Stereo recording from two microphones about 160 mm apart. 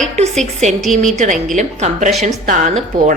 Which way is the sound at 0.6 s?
50° right (ahead or behind).